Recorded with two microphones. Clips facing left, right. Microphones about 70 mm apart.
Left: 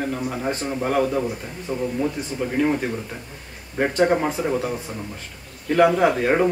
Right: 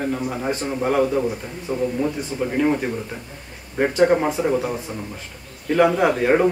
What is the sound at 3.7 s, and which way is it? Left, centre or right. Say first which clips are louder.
Speech: right 2 dB; centre.